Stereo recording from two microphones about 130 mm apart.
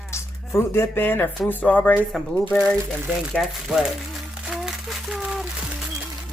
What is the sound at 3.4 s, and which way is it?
Speech, centre (ahead or behind).